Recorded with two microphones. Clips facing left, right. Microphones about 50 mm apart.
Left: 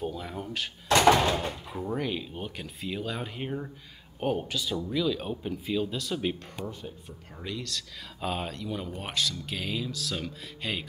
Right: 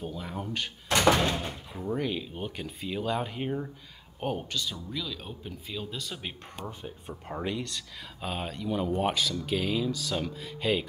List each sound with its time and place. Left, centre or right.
0.0 s speech: centre
1.2 s speech: left
1.7 s speech: centre
6.6 s speech: right
7.4 s speech: right
8.2 s speech: centre